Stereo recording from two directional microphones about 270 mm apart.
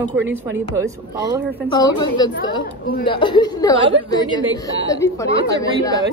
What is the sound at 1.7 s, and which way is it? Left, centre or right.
A woman's voice, centre.